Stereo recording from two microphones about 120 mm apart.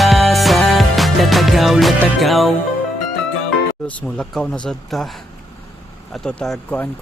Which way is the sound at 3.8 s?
10° left (ahead or behind).